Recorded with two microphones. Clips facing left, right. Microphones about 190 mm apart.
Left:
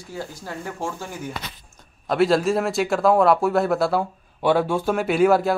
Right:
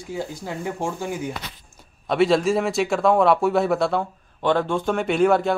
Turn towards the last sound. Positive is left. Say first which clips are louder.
# left 1 dB
turn(degrees=5)  # may be behind; listen again after turning